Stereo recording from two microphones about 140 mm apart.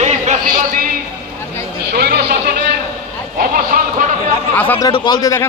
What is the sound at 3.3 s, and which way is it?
Speech, 80° right.